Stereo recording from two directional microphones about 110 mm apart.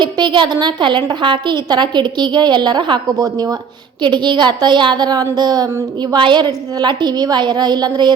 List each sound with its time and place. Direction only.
0.0 s a woman's voice: 45° right (ahead or behind)